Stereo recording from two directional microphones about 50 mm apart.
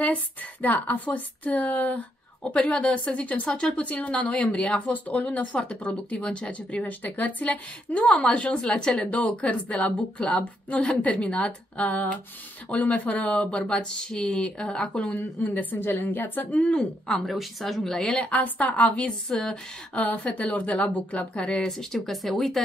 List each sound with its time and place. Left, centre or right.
0.0 s speech: left
6.8 s speech: left; by 14.9 s centre
15.0 s a woman's voice: left
16.7 s speech: centre
17.4 s speech: centre
18.1 s a woman's voice: left
19.3 s speech: centre
19.9 s speech: left
21.5 s speech: centre